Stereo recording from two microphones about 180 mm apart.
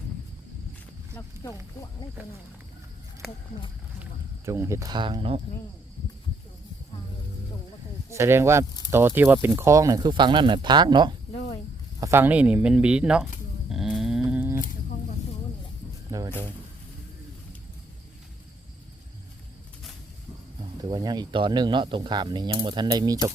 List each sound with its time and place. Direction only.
4.0 s speech: 15° right (ahead or behind); by 5.4 s 30° right (ahead or behind)
8.1 s speech: 15° right (ahead or behind)
11.3 s cricket: 25° left (ahead or behind)
11.9 s speech: 15° right (ahead or behind)
13.7 s a sound: centre (ahead or behind)
16.1 s music: 20° right (ahead or behind)
20.9 s speech: 25° right (ahead or behind)